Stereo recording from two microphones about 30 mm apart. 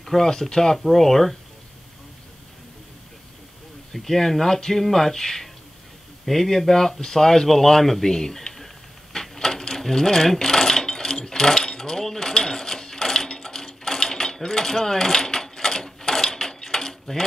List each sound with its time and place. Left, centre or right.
0.0 s speech: centre
0.7 s speech: centre
3.9 s speech: centre
6.7 s speech: centre
9.1 s coin: centre
13.4 s mechanisms: centre